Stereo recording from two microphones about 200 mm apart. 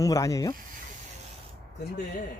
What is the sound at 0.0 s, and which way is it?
Speech, 15° left (ahead or behind).